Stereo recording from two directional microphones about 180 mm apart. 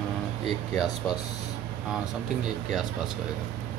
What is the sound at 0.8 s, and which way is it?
Speech, 20° left (ahead or behind).